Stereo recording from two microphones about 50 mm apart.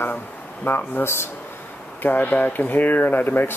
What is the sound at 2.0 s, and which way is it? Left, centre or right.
Speech, left.